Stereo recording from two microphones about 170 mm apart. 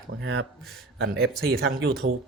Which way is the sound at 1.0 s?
70° right (ahead or behind).